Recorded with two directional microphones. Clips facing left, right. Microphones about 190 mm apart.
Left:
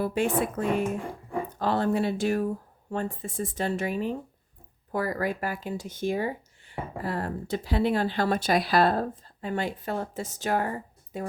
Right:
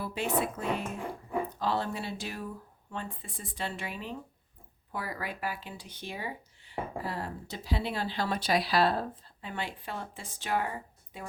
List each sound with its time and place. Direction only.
0.0 s speech: 50° left (ahead or behind)